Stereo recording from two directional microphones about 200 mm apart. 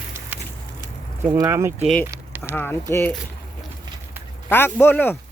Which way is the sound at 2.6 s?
10° left (ahead or behind).